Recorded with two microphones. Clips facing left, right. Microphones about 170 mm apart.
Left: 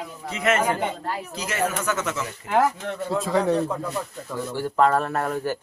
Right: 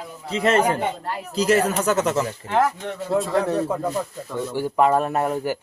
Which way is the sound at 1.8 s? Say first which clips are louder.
Right 6 dB; 35° right (ahead or behind).